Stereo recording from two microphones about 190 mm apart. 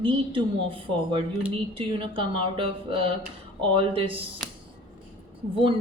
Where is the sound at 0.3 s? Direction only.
30° right (ahead or behind).